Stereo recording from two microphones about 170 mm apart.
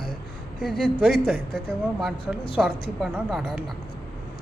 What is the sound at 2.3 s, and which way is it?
Speech, 5° right (ahead or behind).